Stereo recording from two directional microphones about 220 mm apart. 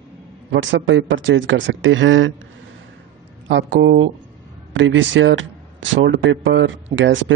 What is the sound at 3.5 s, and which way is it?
Speech, 55° right (ahead or behind).